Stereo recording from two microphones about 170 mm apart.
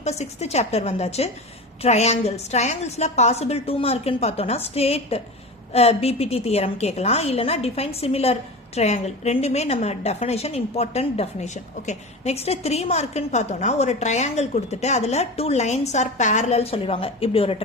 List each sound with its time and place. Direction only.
0.0 s a woman's voice: 40° left (ahead or behind)